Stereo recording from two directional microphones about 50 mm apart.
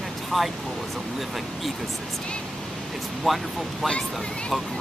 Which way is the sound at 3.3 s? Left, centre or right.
Centre.